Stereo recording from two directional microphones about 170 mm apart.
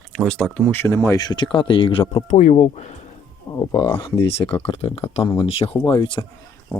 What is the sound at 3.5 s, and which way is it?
Speech, 25° left (ahead or behind).